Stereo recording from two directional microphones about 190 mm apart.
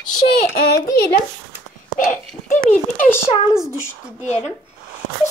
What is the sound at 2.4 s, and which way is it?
Speech, 40° left (ahead or behind).